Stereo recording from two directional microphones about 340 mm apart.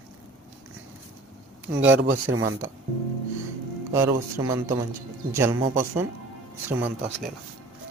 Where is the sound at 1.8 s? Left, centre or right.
Right.